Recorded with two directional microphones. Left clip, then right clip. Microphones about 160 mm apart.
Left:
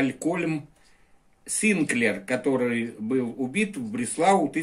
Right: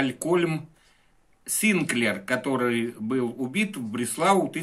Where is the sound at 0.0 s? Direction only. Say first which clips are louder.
Right 2 dB; 55° right (ahead or behind).